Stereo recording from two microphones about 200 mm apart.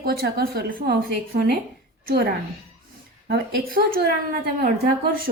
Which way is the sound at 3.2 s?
50° right (ahead or behind).